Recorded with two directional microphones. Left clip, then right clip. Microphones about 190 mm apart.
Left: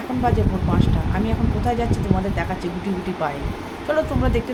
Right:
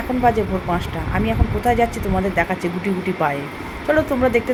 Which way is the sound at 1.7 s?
20° right (ahead or behind).